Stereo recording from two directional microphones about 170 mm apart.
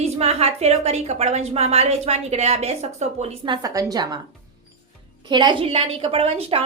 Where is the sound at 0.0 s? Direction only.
35° right (ahead or behind).